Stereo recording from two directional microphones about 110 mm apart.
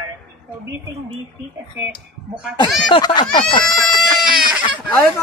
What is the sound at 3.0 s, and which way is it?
Speech, 45° left (ahead or behind).